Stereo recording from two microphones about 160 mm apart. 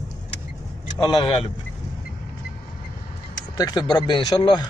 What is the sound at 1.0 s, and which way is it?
Speech, 30° left (ahead or behind).